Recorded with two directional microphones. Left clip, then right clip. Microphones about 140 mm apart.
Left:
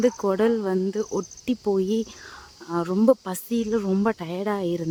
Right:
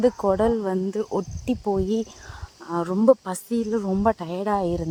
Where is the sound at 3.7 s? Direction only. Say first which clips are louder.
Left 2 dB; 15° left (ahead or behind).